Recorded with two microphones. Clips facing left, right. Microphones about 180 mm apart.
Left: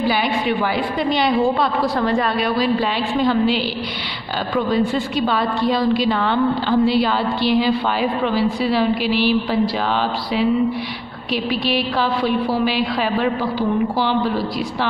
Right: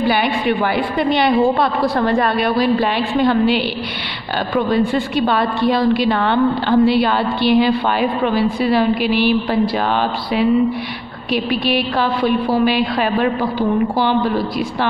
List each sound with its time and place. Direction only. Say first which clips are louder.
0.0 s a woman's voice: right 2 dB; 60° right (ahead or behind)
4.6 s a woman's voice: right 2 dB; 60° right (ahead or behind)
11.6 s a woman's voice: right 2 dB; 55° right (ahead or behind)